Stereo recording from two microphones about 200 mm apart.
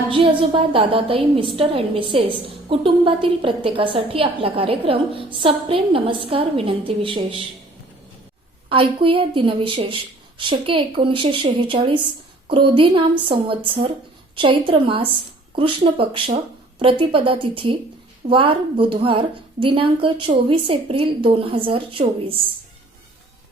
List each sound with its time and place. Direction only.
0.1 s a woman's voice: 25° right (ahead or behind)
8.7 s a woman's voice: 25° right (ahead or behind)